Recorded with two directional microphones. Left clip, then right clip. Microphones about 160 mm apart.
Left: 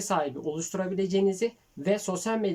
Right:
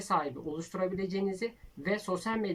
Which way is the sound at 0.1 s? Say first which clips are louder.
Left 3 dB; 40° left (ahead or behind).